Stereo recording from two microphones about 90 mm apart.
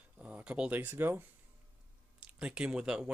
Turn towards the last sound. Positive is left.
turn(degrees=-10)  # may be behind; listen again after turning